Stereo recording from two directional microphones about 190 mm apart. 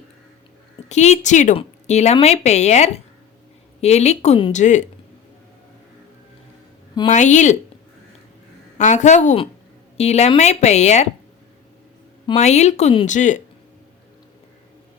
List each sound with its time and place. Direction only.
0.9 s a woman's voice: 35° left (ahead or behind)
7.1 s a woman's voice: 40° left (ahead or behind)
8.8 s a woman's voice: 40° left (ahead or behind)
12.4 s a woman's voice: 35° left (ahead or behind)